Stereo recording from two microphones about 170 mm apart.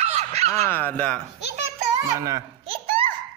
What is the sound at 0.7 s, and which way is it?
Speech, 10° left (ahead or behind).